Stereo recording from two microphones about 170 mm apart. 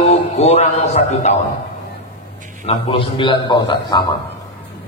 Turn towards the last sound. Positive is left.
turn(degrees=25)  # may be behind; listen again after turning